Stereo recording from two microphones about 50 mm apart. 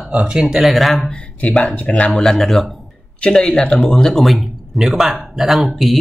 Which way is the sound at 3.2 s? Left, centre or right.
Centre.